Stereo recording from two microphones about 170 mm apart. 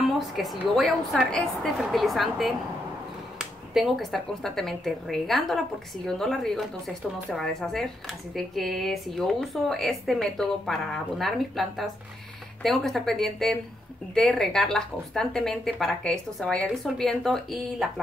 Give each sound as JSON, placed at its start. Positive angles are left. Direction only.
{"t": 0.0, "sound": "speech", "side_deg": 0}